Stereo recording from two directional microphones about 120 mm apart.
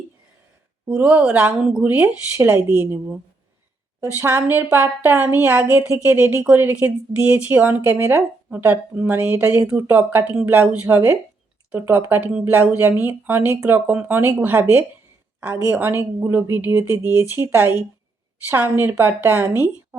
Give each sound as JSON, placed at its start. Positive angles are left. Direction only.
{"t": 0.9, "sound": "speech", "side_deg": -10}
{"t": 4.0, "sound": "speech", "side_deg": -20}